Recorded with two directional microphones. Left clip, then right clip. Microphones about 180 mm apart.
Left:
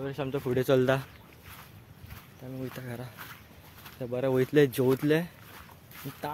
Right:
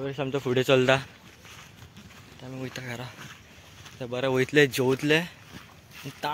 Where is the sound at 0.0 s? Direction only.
50° right (ahead or behind).